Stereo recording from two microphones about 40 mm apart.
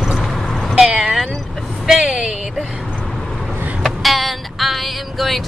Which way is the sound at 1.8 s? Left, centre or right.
Centre.